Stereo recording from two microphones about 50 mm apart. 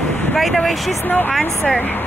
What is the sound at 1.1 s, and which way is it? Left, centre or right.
Speech, left.